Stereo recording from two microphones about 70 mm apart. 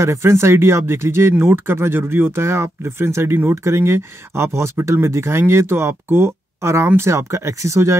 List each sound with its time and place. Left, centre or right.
0.0 s speech: right